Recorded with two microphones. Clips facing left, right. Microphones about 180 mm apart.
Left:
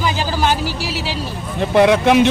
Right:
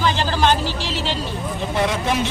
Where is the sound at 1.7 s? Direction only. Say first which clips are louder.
Left 10 dB; 65° left (ahead or behind).